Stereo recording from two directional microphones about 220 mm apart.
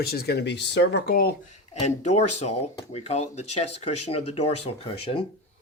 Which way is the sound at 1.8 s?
30° left (ahead or behind).